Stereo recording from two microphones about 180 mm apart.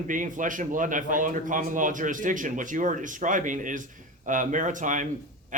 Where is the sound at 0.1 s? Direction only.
45° right (ahead or behind).